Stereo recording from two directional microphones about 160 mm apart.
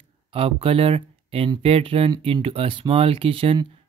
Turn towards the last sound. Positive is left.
turn(degrees=-35)  # may be behind; listen again after turning